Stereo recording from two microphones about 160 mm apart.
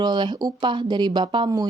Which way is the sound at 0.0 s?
30° right (ahead or behind).